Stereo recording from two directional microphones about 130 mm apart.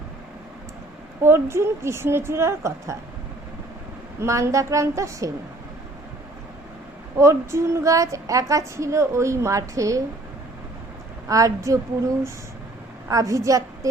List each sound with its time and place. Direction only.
1.2 s a woman's voice: 20° right (ahead or behind)
4.2 s a woman's voice: 20° right (ahead or behind)
7.2 s a woman's voice: 20° right (ahead or behind)
11.3 s a woman's voice: 25° right (ahead or behind)
13.1 s a woman's voice: 25° right (ahead or behind)